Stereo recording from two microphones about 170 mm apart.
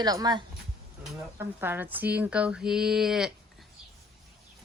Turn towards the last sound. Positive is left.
turn(degrees=-5)  # may be behind; listen again after turning